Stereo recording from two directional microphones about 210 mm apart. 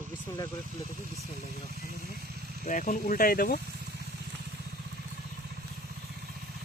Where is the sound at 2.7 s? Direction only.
40° left (ahead or behind).